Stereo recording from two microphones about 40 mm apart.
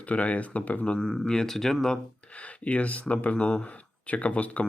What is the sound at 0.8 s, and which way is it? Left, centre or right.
Speech, centre.